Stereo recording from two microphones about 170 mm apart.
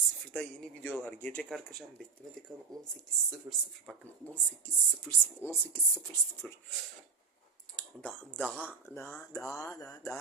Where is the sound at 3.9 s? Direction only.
Centre (ahead or behind).